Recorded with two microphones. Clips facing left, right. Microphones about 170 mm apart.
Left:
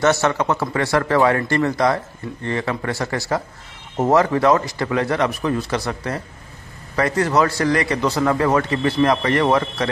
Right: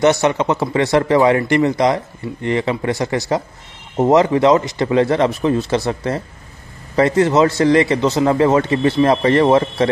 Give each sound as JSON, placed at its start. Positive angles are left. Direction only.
{"t": 0.0, "sound": "speech", "side_deg": -15}